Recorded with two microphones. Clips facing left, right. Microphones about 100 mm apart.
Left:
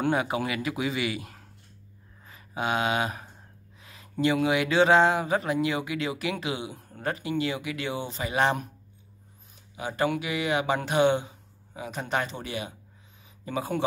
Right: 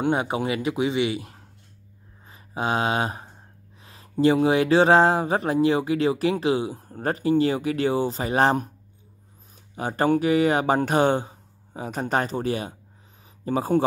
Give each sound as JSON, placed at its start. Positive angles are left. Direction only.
{"t": 0.0, "sound": "a man's voice", "side_deg": -25}
{"t": 9.8, "sound": "speech", "side_deg": -45}